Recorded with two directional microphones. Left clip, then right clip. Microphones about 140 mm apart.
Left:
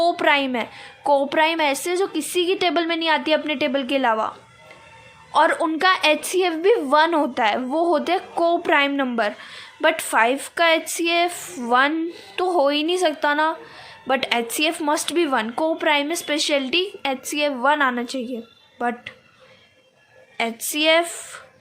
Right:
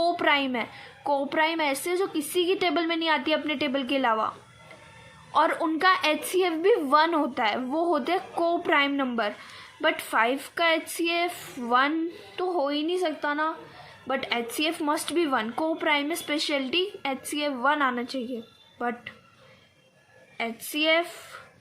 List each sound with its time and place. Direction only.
0.0 s a woman's voice: 25° left (ahead or behind)
5.3 s a woman's voice: 25° left (ahead or behind)
12.4 s speech: 45° left (ahead or behind)
14.7 s speech: 30° left (ahead or behind)
20.3 s speech: 40° left (ahead or behind)